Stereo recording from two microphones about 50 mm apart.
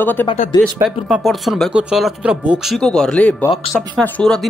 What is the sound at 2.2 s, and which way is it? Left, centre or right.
Speech, right.